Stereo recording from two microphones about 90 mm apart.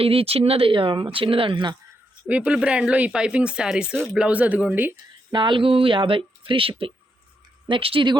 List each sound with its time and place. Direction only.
0.0 s speech: 90° right; by 1.7 s 70° right (ahead or behind)
2.2 s speech: 15° right (ahead or behind)
5.3 s speech: 60° right (ahead or behind); by 8.1 s 80° right